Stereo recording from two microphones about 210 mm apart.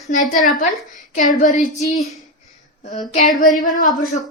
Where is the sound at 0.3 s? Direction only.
40° left (ahead or behind).